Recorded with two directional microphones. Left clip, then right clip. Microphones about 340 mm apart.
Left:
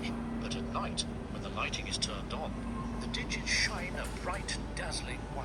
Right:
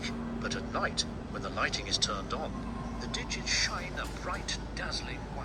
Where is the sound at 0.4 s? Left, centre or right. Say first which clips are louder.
Right 6 dB; right.